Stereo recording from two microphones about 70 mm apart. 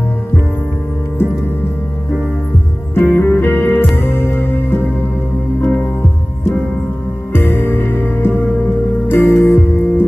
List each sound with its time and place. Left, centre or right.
2.9 s music: left
7.3 s music: left